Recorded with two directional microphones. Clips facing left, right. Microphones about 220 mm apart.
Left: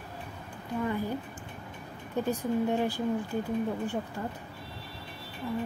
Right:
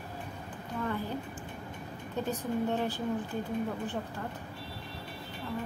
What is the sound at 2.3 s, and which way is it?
Speech, 10° left (ahead or behind).